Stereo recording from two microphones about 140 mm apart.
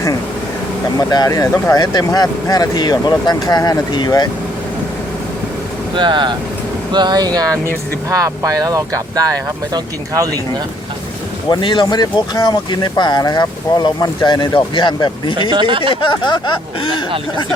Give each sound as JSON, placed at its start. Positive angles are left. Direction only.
{"t": 0.9, "sound": "speech", "side_deg": 25}
{"t": 6.0, "sound": "speech", "side_deg": -35}
{"t": 11.5, "sound": "speech", "side_deg": 35}
{"t": 15.4, "sound": "speech", "side_deg": -35}
{"t": 16.0, "sound": "speech", "side_deg": 35}